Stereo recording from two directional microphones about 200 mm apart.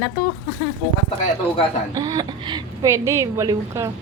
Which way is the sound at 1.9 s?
20° right (ahead or behind).